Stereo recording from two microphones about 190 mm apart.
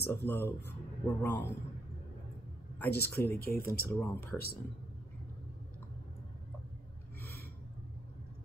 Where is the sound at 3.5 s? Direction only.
50° left (ahead or behind).